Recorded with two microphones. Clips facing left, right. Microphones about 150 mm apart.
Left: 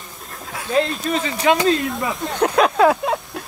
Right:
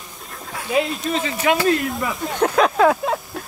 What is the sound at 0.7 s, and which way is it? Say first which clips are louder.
Speech: left 1 dB; 10° right (ahead or behind).